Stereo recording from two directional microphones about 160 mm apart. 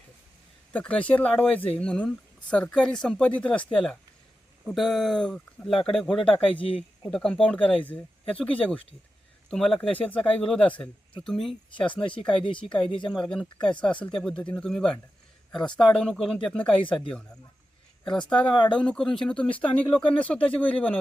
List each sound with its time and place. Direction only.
0.7 s speech: 10° left (ahead or behind)
6.1 s speech: 35° left (ahead or behind)
7.1 s speech: 5° left (ahead or behind)
18.0 s speech: 5° left (ahead or behind)